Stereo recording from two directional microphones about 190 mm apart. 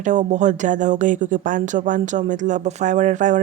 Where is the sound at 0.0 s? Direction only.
40° right (ahead or behind).